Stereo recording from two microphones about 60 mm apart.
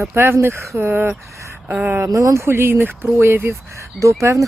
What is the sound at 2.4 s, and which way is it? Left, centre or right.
Speech, right.